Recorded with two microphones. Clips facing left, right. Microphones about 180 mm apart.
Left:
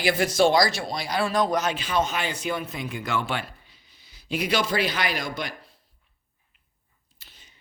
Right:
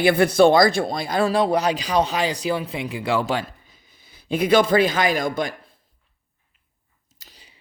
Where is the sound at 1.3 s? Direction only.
30° right (ahead or behind).